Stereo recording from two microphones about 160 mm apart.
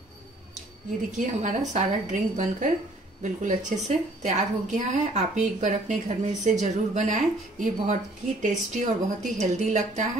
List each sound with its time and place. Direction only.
1.1 s a woman's voice: 50° right (ahead or behind)